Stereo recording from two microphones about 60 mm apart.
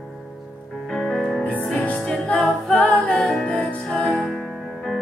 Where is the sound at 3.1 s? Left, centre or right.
Centre.